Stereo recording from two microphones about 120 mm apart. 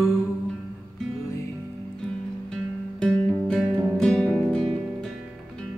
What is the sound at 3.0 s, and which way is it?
Music, 10° left (ahead or behind).